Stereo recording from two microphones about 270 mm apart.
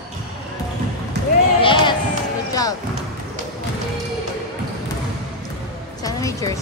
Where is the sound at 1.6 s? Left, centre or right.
Centre.